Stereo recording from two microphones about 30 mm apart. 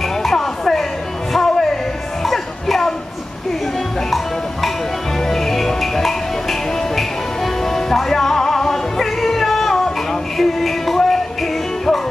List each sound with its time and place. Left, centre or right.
0.2 s music: centre
5.3 s music: centre
7.6 s music: centre